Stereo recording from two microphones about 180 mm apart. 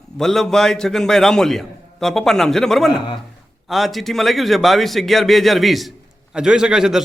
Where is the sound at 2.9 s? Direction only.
25° left (ahead or behind).